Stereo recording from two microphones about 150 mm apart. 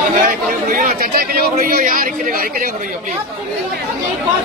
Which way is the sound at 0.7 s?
65° right (ahead or behind).